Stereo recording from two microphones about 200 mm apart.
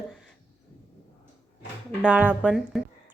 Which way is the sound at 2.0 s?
5° right (ahead or behind).